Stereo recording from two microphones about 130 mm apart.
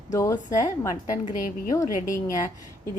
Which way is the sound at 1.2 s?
75° left (ahead or behind).